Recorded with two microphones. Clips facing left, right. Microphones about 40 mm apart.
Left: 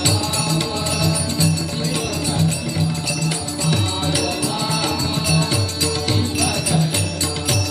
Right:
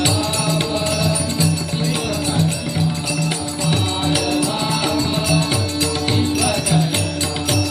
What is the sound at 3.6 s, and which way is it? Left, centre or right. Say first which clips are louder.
Music: right 2 dB; centre.